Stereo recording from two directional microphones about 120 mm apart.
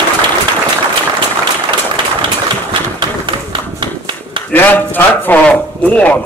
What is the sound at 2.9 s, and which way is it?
Run, 40° right (ahead or behind).